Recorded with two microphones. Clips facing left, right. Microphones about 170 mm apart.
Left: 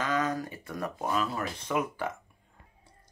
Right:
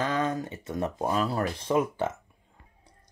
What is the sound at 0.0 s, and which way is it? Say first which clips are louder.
Speech: right 2 dB; 30° right (ahead or behind).